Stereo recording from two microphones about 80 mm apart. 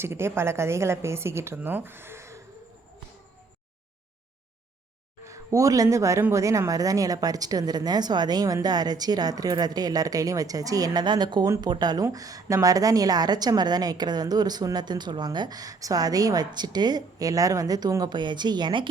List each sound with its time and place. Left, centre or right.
0.0 s a woman's voice: right
5.2 s a woman's voice: right
11.0 s a woman's voice: right
12.1 s a woman's voice: right